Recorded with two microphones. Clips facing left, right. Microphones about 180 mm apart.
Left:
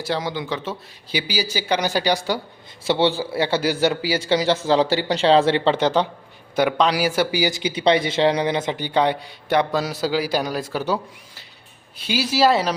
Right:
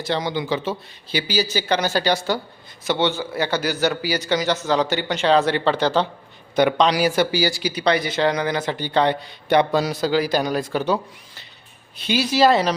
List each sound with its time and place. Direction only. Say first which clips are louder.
0.0 s a man's voice: right 1 dB; 5° left (ahead or behind)
1.1 s speech: right 2 dB; 10° left (ahead or behind)
2.8 s a man's voice: left 2 dB; 30° left (ahead or behind)
6.6 s speech: right 2 dB; 5° left (ahead or behind)